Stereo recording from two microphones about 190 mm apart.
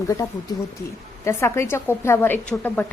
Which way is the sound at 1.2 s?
15° left (ahead or behind).